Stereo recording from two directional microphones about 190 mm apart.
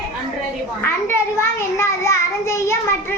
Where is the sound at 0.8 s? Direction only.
15° left (ahead or behind).